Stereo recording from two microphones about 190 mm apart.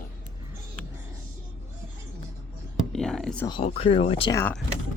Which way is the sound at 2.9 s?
Centre (ahead or behind).